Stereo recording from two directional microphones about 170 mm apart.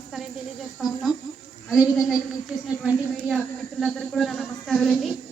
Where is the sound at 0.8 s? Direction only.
Centre (ahead or behind).